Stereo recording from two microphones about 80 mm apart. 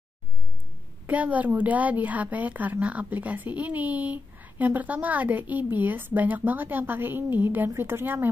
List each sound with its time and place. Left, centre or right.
1.0 s a woman's voice: centre